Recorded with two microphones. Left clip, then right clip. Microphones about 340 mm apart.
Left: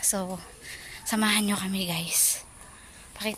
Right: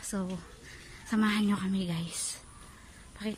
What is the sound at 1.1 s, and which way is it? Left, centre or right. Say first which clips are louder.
Speech: left 5 dB; centre.